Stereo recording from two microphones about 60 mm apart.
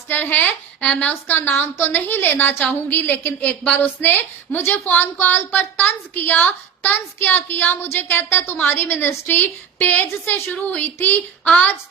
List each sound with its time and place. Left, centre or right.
0.1 s a woman's voice: left
0.9 s a woman's voice: centre
1.1 s a woman's voice: left